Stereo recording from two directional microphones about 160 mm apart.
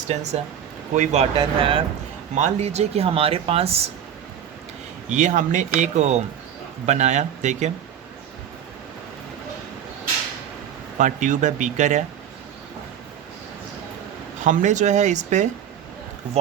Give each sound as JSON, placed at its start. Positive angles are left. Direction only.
{"t": 0.1, "sound": "speech", "side_deg": -45}
{"t": 5.0, "sound": "speech", "side_deg": -50}
{"t": 10.9, "sound": "speech", "side_deg": -50}
{"t": 14.4, "sound": "speech", "side_deg": -50}